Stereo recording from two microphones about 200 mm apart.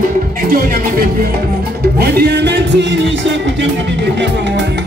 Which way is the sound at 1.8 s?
55° right (ahead or behind).